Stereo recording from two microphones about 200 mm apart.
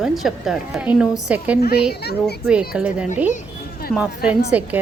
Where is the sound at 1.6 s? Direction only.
50° left (ahead or behind).